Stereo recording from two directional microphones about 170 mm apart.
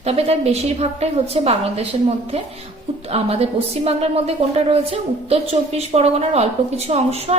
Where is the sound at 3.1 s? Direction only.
35° right (ahead or behind).